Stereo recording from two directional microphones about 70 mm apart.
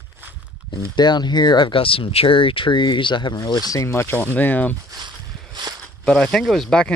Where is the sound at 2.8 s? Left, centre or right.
Left.